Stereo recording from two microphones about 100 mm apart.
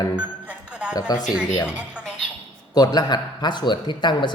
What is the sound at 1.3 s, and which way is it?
Speech, 5° right (ahead or behind).